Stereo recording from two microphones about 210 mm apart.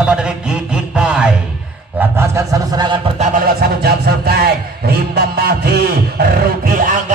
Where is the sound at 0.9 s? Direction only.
5° right (ahead or behind).